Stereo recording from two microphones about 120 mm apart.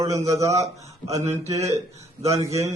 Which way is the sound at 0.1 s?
25° right (ahead or behind).